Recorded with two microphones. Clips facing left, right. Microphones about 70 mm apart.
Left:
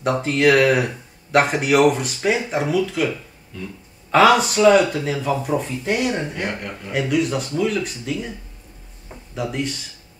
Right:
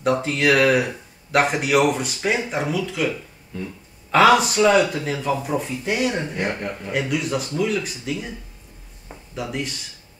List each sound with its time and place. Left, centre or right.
0.0 s speech: centre
4.1 s speech: centre
9.3 s speech: centre